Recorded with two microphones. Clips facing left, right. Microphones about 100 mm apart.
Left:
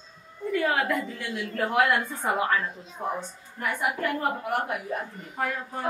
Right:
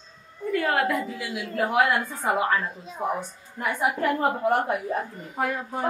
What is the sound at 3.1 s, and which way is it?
A woman's voice, 20° right (ahead or behind).